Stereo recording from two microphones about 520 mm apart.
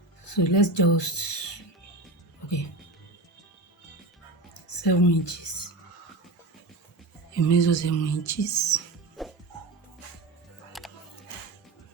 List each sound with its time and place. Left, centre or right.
0.3 s speech: left
4.8 s speech: left
7.3 s speech: left
9.2 s music: centre
10.7 s music: centre